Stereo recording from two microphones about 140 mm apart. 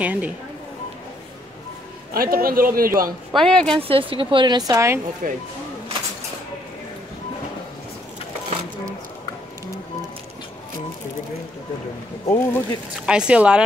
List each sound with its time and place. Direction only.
0.0 s speech: 10° right (ahead or behind)
2.1 s a man's voice: 90° right
3.3 s speech: 5° left (ahead or behind)
3.7 s a woman's voice: 40° right (ahead or behind); by 5.0 s 20° right (ahead or behind)
5.2 s speech: 90° right
12.3 s speech: 15° left (ahead or behind)
13.0 s speech: 5° right (ahead or behind)